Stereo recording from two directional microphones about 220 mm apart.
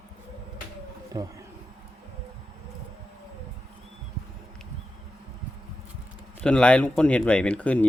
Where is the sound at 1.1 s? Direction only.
20° right (ahead or behind).